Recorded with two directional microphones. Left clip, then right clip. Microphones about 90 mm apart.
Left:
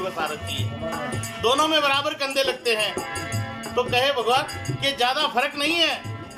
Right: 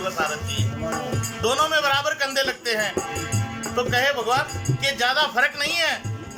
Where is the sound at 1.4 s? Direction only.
30° left (ahead or behind).